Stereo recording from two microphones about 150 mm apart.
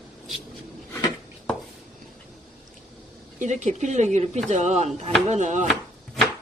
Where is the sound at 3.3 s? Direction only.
55° right (ahead or behind).